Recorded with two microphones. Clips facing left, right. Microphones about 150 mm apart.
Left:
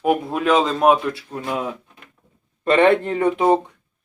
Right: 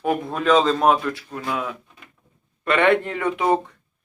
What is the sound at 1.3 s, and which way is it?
Speech, 25° left (ahead or behind).